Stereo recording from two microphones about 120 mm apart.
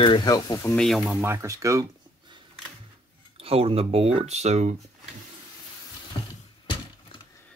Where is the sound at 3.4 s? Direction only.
55° right (ahead or behind).